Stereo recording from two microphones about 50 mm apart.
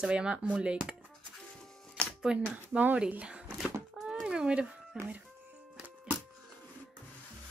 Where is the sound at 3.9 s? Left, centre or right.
Centre.